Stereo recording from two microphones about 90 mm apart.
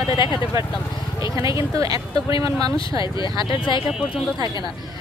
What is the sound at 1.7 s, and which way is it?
Speech, 40° right (ahead or behind).